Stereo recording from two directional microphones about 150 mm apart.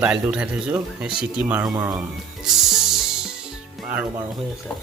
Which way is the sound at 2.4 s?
5° right (ahead or behind).